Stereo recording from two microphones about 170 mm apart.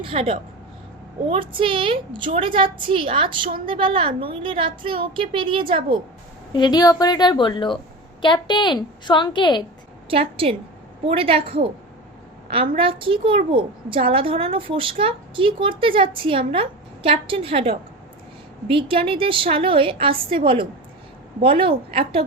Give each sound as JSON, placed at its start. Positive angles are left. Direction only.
{"t": 0.0, "sound": "a woman's voice", "side_deg": -35}
{"t": 6.5, "sound": "a woman's voice", "side_deg": 25}
{"t": 10.1, "sound": "a woman's voice", "side_deg": -35}
{"t": 12.7, "sound": "a woman's voice", "side_deg": -30}